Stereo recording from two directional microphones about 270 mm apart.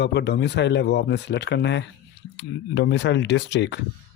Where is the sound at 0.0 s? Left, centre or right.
Left.